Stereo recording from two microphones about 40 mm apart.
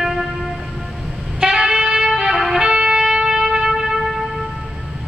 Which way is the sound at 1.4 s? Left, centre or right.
Centre.